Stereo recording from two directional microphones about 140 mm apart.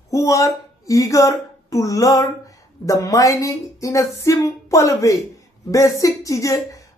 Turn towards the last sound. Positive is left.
turn(degrees=25)  # may be behind; listen again after turning